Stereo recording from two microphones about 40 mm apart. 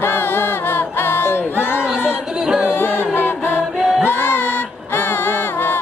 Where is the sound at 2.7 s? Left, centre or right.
Left.